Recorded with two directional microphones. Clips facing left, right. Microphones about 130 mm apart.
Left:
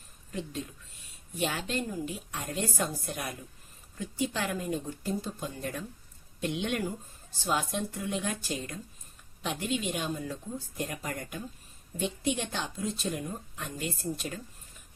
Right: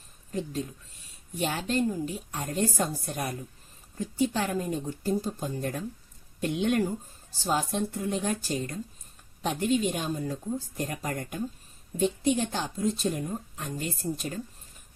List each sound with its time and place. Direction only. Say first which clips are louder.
0.3 s a woman's voice: right 5 dB; 40° right (ahead or behind)